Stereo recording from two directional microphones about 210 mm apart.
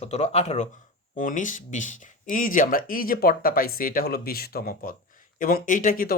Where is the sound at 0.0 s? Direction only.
30° left (ahead or behind).